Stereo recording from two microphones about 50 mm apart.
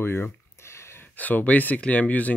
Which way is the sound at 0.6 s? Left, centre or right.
Left.